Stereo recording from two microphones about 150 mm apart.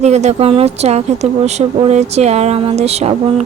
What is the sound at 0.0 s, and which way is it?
Speech, 50° right (ahead or behind).